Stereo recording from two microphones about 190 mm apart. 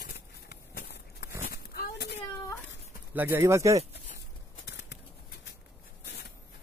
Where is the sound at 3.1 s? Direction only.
10° right (ahead or behind).